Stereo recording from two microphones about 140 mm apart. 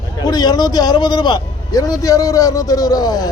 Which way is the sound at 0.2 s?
30° left (ahead or behind).